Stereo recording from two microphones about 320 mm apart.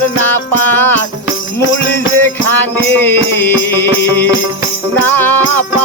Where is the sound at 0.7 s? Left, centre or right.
Centre.